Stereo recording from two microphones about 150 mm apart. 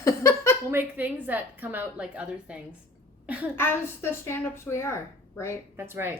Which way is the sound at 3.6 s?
15° left (ahead or behind).